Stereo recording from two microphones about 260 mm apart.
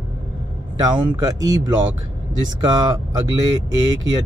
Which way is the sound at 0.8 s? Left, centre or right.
Centre.